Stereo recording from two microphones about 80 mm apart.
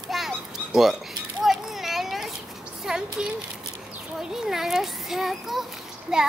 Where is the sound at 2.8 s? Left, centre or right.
Centre.